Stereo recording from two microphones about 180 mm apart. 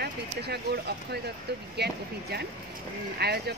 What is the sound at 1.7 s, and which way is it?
Speech, 65° right (ahead or behind).